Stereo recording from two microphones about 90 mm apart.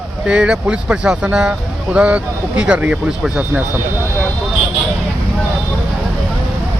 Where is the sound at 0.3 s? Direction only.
10° right (ahead or behind).